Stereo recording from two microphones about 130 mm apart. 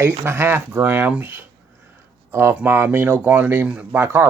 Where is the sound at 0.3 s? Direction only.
20° right (ahead or behind).